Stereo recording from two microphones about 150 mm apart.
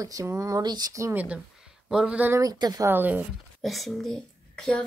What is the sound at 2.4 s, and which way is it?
Speech, 25° right (ahead or behind).